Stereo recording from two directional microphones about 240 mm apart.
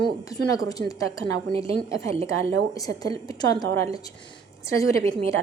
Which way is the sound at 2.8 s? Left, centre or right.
Centre.